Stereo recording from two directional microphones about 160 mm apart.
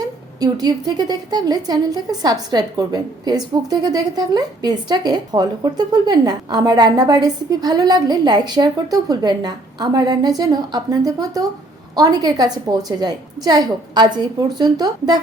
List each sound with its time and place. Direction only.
0.3 s a woman's voice: 25° right (ahead or behind)